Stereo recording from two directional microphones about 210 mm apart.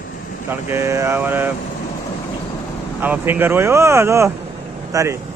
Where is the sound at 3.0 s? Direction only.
10° right (ahead or behind).